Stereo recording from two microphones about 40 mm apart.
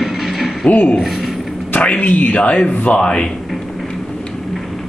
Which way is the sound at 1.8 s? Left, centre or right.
Left.